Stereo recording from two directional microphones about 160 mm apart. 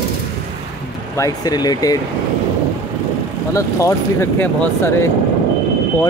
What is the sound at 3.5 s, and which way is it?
Speech, 15° left (ahead or behind).